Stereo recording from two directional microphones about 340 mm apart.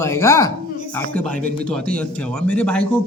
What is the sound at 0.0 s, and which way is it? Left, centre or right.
A man's voice, centre.